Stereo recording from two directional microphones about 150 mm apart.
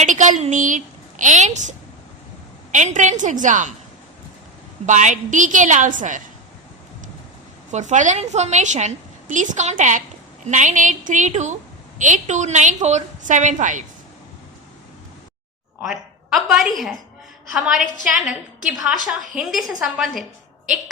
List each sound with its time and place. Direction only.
0.0 s a woman's voice: 55° right (ahead or behind)
2.7 s a woman's voice: 55° right (ahead or behind)
4.9 s a woman's voice: 55° right (ahead or behind)
7.7 s a woman's voice: 55° right (ahead or behind)
15.8 s a woman's voice: centre (ahead or behind)